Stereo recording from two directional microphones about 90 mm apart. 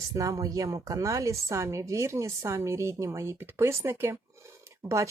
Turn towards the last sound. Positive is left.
turn(degrees=-35)  # may be behind; listen again after turning